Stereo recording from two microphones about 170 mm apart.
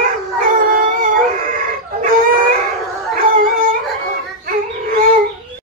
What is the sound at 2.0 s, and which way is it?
Howl, 55° right (ahead or behind).